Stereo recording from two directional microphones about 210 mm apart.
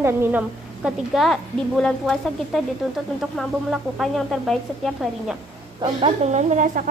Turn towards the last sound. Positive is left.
turn(degrees=-35)  # may be behind; listen again after turning